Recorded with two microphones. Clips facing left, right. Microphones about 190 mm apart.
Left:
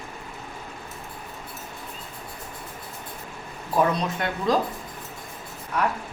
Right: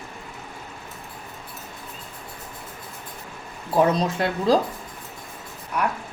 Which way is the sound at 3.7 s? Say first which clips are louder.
Right 3 dB; 30° right (ahead or behind).